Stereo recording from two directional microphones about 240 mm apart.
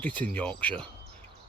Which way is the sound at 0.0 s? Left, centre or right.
Centre.